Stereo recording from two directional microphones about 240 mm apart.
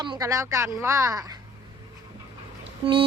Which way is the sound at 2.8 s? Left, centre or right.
Right.